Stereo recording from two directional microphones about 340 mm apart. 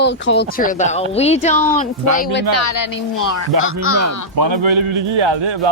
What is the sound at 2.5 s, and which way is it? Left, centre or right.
Speech, left.